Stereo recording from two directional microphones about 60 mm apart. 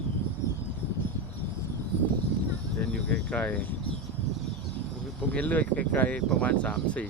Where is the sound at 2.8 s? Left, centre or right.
Centre.